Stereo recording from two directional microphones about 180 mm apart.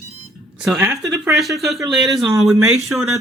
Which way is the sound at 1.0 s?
20° right (ahead or behind).